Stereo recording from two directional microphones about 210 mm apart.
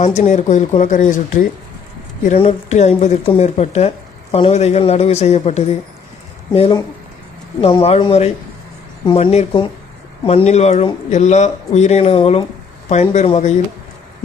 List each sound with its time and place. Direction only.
0.0 s speech: 35° left (ahead or behind)